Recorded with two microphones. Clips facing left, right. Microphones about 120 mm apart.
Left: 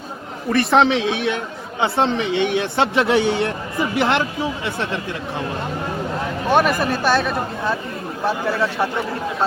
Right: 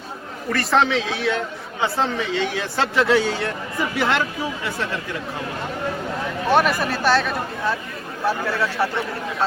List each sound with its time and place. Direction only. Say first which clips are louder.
0.5 s speech: left 4 dB; 20° left (ahead or behind)
6.5 s speech: left 2 dB; 15° left (ahead or behind)